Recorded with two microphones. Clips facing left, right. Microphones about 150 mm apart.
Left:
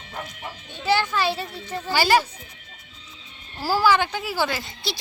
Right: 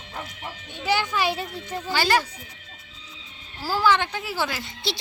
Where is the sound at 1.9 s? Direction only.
5° left (ahead or behind).